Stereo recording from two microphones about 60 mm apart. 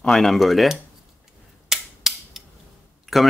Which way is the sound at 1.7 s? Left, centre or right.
Centre.